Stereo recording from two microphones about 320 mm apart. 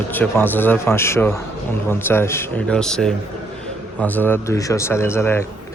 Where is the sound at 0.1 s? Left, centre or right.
Centre.